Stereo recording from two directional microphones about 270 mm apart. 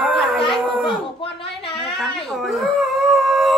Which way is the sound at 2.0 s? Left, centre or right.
Centre.